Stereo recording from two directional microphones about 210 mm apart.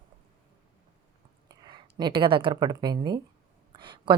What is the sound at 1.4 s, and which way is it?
A woman's voice, 20° right (ahead or behind).